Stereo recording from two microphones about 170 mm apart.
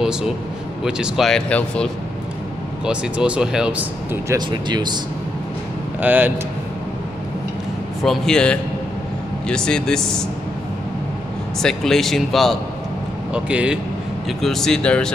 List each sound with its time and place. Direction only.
0.0 s a man's voice: 5° right (ahead or behind)
4.5 s speech: 25° right (ahead or behind)
5.9 s speech: 10° right (ahead or behind)
8.0 s speech: 5° left (ahead or behind)
11.6 s speech: centre (ahead or behind)